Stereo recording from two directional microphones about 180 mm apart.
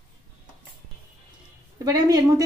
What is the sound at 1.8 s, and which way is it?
Speech, 20° right (ahead or behind).